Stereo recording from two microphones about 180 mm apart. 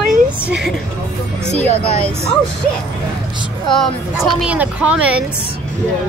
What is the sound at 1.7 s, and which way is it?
Speech, 35° right (ahead or behind).